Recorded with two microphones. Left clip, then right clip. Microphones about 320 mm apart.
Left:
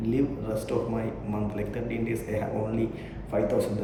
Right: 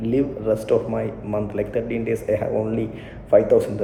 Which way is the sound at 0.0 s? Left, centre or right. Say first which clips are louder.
Right 6 dB; centre.